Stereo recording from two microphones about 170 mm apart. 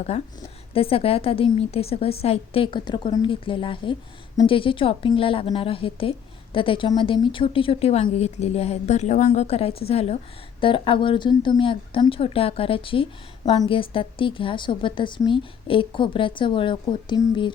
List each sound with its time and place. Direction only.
0.1 s a woman's voice: 35° left (ahead or behind)